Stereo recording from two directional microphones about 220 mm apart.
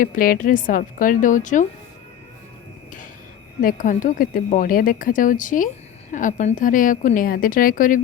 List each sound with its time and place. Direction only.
0.0 s a woman's voice: 40° left (ahead or behind)
3.6 s a woman's voice: 40° left (ahead or behind)